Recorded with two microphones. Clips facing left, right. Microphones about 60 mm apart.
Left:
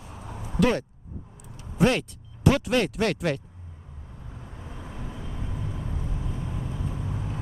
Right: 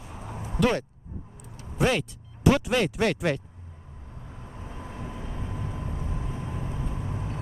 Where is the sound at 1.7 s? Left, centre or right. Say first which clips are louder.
Left 2 dB; centre.